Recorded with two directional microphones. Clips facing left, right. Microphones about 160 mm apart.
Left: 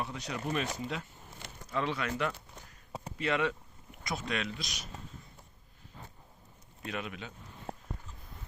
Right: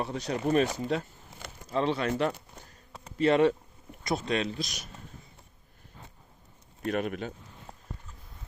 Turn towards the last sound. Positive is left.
turn(degrees=55)  # may be behind; listen again after turning